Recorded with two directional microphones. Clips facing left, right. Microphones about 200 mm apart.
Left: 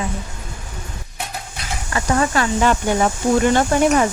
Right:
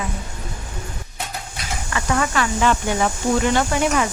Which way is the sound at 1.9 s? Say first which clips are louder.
Left 3 dB; 35° left (ahead or behind).